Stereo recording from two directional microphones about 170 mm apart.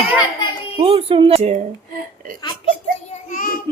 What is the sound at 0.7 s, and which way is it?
Speech, 35° right (ahead or behind).